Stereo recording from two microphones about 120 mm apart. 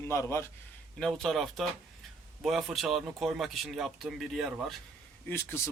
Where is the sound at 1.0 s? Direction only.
5° left (ahead or behind).